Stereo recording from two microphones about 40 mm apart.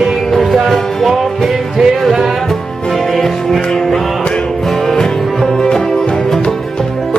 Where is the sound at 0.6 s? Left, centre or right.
Centre.